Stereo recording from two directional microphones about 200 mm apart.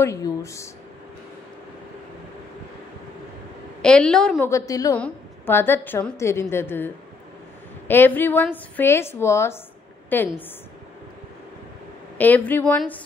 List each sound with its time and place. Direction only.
0.0 s a woman's voice: 15° left (ahead or behind)
3.8 s a woman's voice: 5° left (ahead or behind)
4.5 s a woman's voice: 15° left (ahead or behind)
7.9 s a woman's voice: 10° left (ahead or behind)
12.2 s a woman's voice: 10° left (ahead or behind)